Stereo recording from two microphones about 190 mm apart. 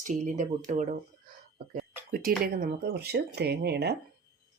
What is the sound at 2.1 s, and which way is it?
Speech, 50° right (ahead or behind).